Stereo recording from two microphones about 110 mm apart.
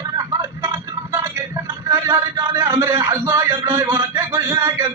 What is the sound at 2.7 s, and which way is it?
A man's voice, 25° right (ahead or behind).